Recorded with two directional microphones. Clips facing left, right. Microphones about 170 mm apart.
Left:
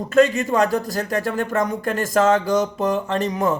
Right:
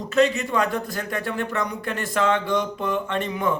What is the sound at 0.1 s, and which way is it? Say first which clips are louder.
Speech: left 4 dB; 50° left (ahead or behind).